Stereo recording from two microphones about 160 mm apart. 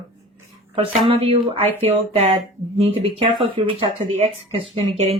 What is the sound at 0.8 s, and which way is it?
Speech, 35° right (ahead or behind).